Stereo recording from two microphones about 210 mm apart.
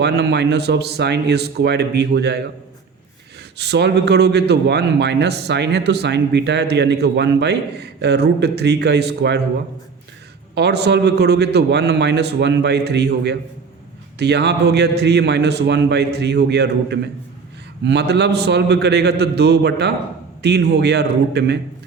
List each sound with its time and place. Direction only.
0.0 s a man's voice: 55° right (ahead or behind)
3.6 s a man's voice: 55° right (ahead or behind)
10.5 s a man's voice: 50° right (ahead or behind)